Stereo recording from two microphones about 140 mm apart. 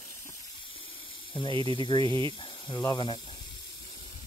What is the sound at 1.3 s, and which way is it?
Speech, 35° left (ahead or behind).